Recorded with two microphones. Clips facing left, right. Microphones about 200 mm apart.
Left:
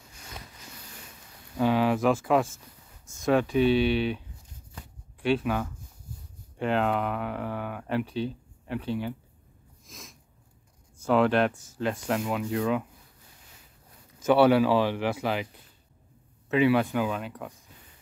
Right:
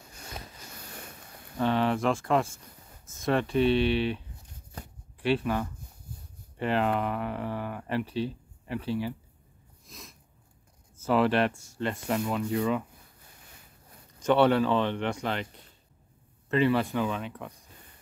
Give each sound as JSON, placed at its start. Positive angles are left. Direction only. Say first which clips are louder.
{"t": 0.8, "sound": "boat", "louder": "right 4 dB", "side_deg": -55}
{"t": 1.6, "sound": "speech", "louder": "left 3 dB", "side_deg": 5}
{"t": 9.8, "sound": "sneeze", "louder": "left 1 dB", "side_deg": 0}
{"t": 11.0, "sound": "speech", "louder": "left 2 dB", "side_deg": 0}
{"t": 14.2, "sound": "speech", "louder": "left 2 dB", "side_deg": 5}
{"t": 16.4, "sound": "speech", "louder": "left 2 dB", "side_deg": 5}